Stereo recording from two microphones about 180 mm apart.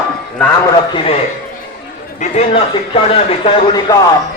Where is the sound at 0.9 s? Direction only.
30° left (ahead or behind).